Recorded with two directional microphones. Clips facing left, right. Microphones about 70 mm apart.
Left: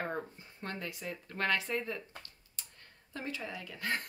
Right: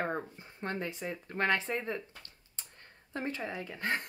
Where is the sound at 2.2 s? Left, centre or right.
Right.